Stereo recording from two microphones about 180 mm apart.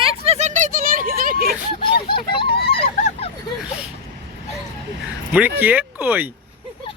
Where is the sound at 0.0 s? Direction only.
35° right (ahead or behind); by 1.5 s 55° right (ahead or behind).